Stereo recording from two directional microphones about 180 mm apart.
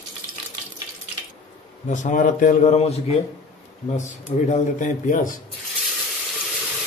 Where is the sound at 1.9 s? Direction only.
45° left (ahead or behind).